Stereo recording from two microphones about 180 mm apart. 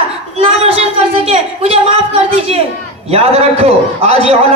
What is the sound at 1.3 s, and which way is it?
A man's voice, 35° right (ahead or behind).